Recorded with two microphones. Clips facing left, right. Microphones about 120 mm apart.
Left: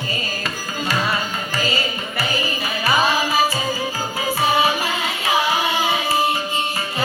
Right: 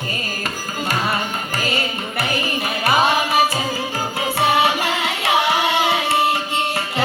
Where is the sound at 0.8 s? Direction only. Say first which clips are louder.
Even; 55° right (ahead or behind).